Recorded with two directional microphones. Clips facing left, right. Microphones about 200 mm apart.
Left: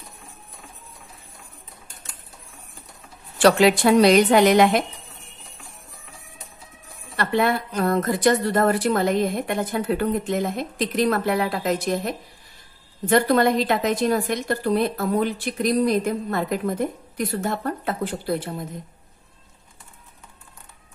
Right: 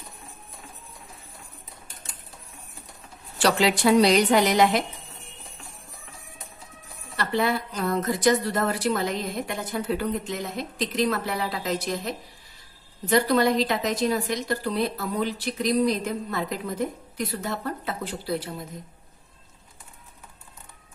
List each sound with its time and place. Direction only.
3.4 s a woman's voice: 55° left (ahead or behind)
7.2 s a woman's voice: 55° left (ahead or behind)